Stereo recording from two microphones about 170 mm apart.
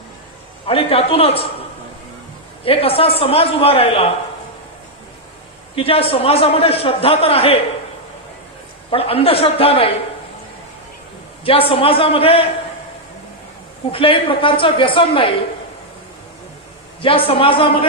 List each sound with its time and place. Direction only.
0.7 s a man's voice: 35° left (ahead or behind)
2.6 s a man's voice: 35° left (ahead or behind)
5.7 s a man's voice: 35° left (ahead or behind)
8.9 s a man's voice: 35° left (ahead or behind)
11.7 s a man's voice: 35° left (ahead or behind)
13.9 s a man's voice: 30° left (ahead or behind)
17.0 s a man's voice: 30° left (ahead or behind)